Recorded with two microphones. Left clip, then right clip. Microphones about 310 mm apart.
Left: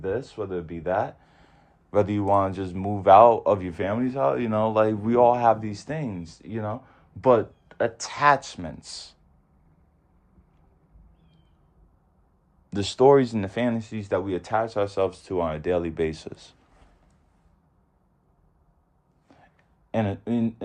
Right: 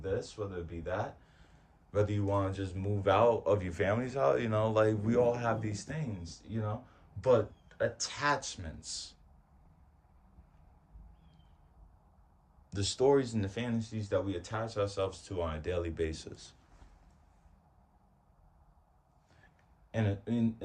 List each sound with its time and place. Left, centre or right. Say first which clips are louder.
0.9 s a sound: left 10 dB; centre
1.9 s speech: left 11 dB; centre
12.7 s speech: left 10 dB; centre
19.9 s speech: left 9 dB; centre